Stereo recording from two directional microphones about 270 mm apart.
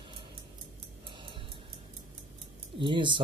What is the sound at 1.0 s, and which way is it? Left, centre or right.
Music, centre.